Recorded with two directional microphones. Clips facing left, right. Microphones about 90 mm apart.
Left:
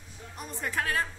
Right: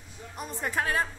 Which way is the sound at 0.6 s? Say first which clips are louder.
Right 2 dB; 20° right (ahead or behind).